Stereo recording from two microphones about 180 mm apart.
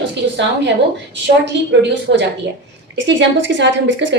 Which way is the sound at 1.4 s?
75° right (ahead or behind).